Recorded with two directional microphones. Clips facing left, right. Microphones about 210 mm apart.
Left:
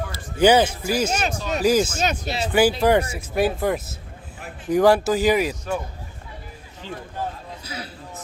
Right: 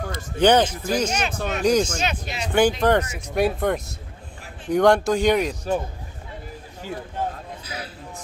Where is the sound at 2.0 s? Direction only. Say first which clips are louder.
Left 3 dB; 40° left (ahead or behind).